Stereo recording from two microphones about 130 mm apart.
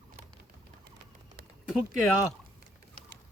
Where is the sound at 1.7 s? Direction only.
5° right (ahead or behind).